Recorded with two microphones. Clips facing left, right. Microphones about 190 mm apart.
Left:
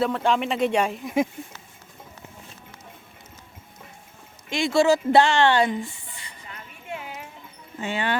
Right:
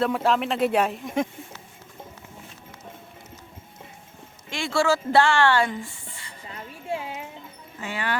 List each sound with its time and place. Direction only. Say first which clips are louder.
0.1 s speech: even; 5° right (ahead or behind)
4.4 s speech: left 4 dB; 15° left (ahead or behind)
6.5 s a sound: right 6 dB; 30° right (ahead or behind)
7.8 s speech: left 4 dB; 25° left (ahead or behind)